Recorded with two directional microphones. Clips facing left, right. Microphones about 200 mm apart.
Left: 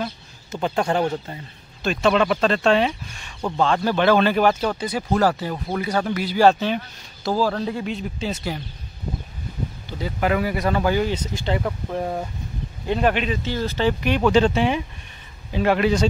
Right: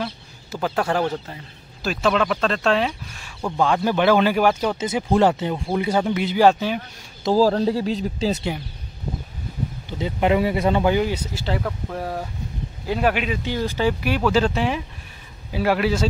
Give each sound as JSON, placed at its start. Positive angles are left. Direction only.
{"t": 0.0, "sound": "bird", "side_deg": -5}
{"t": 1.8, "sound": "speech", "side_deg": -5}
{"t": 4.7, "sound": "speech", "side_deg": -20}
{"t": 7.3, "sound": "speech", "side_deg": -35}
{"t": 9.8, "sound": "speech", "side_deg": -20}
{"t": 12.8, "sound": "speech", "side_deg": -5}